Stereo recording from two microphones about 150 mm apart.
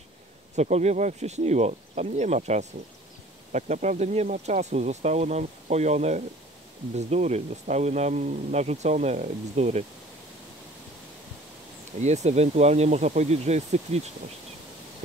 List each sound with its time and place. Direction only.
0.6 s speech: 50° right (ahead or behind)
12.0 s speech: 50° right (ahead or behind)